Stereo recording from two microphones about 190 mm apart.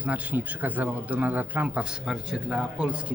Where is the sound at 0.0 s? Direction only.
5° right (ahead or behind).